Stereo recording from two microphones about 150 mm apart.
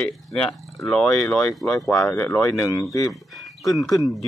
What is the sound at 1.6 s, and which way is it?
Speech, 15° left (ahead or behind).